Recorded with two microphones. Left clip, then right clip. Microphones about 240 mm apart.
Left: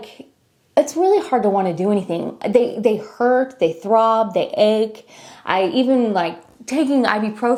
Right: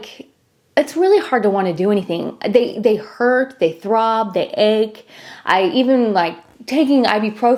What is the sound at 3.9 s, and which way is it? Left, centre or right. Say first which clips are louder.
A woman's voice: left 2 dB; centre.